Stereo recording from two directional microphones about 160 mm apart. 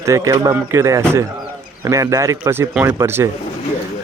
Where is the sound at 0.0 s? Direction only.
20° right (ahead or behind).